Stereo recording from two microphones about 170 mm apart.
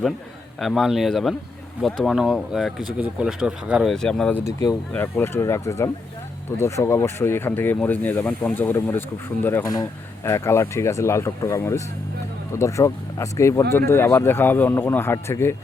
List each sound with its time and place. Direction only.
0.6 s speech: centre (ahead or behind)
4.4 s speech: 20° left (ahead or behind)